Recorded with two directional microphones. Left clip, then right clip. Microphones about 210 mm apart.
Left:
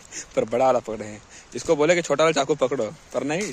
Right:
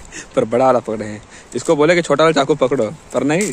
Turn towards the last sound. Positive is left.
turn(degrees=-5)  # may be behind; listen again after turning